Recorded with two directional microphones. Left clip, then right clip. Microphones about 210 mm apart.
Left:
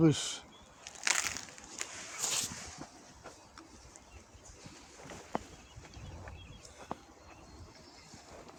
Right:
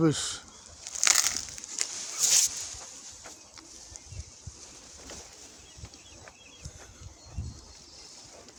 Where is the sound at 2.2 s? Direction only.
20° right (ahead or behind).